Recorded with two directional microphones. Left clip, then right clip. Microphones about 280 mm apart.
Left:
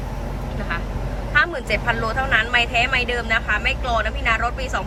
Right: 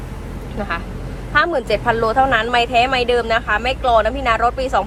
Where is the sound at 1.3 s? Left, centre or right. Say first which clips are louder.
Right 3 dB; centre.